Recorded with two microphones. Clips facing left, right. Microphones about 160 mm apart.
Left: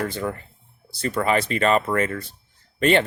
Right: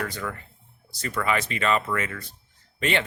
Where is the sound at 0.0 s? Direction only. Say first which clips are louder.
Left 5 dB; 30° left (ahead or behind).